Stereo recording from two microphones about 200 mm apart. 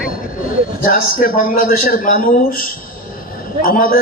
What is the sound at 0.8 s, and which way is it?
A man's voice, 45° left (ahead or behind).